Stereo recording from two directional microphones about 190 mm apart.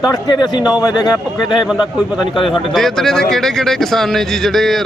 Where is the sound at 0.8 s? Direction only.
20° left (ahead or behind).